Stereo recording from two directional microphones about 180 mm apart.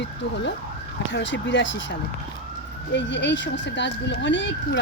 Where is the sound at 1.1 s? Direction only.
90° left.